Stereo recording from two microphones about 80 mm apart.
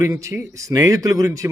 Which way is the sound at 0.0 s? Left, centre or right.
Right.